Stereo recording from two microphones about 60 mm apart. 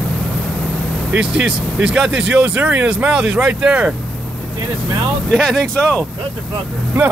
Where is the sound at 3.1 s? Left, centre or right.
Centre.